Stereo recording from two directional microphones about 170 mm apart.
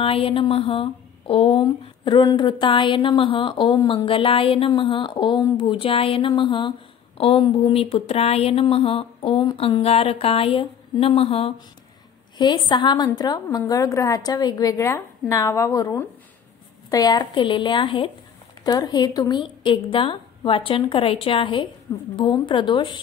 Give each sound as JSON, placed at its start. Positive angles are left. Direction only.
{"t": 0.0, "sound": "a woman's voice", "side_deg": 35}